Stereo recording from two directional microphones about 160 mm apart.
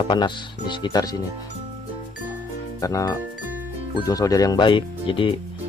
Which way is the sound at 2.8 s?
20° left (ahead or behind).